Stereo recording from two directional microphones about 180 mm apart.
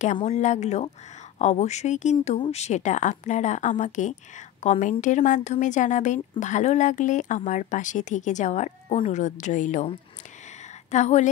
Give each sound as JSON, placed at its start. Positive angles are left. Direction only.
{"t": 0.2, "sound": "a woman's voice", "side_deg": 40}